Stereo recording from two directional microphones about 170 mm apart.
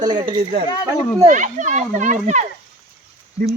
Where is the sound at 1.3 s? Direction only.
45° right (ahead or behind).